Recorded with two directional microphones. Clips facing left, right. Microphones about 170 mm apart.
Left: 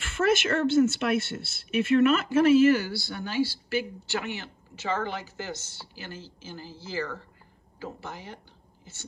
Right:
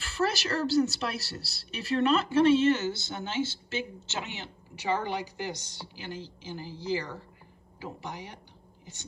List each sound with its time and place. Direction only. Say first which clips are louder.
0.0 s a woman's voice: left 5 dB; 35° right (ahead or behind); by 9.1 s 15° right (ahead or behind)